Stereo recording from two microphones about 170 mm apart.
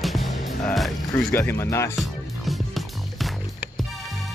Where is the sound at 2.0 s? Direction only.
Centre (ahead or behind).